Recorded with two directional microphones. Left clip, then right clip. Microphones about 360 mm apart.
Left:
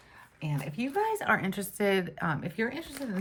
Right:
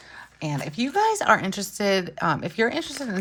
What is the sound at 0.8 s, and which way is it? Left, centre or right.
Speech, centre.